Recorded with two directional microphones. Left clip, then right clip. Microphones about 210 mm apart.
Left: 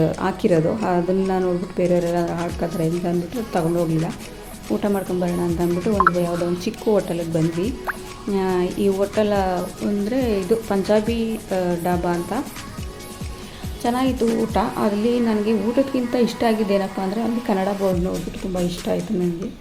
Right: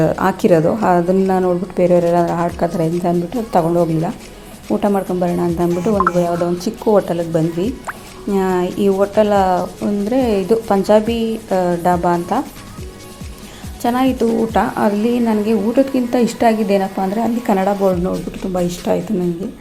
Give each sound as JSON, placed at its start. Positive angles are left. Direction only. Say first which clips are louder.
{"t": 0.0, "sound": "a woman's voice", "louder": "right 6 dB", "side_deg": -15}
{"t": 4.7, "sound": "a woman's voice", "louder": "right 5 dB", "side_deg": -10}
{"t": 13.8, "sound": "a woman's voice", "louder": "right 5 dB", "side_deg": -10}